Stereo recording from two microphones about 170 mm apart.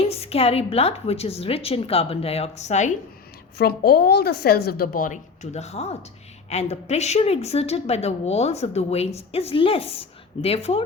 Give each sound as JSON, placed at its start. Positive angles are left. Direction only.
{"t": 0.1, "sound": "a woman's voice", "side_deg": 35}
{"t": 3.6, "sound": "a woman's voice", "side_deg": 65}